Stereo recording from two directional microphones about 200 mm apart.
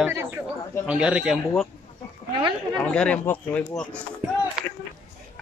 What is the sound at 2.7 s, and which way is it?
Speech, 5° left (ahead or behind).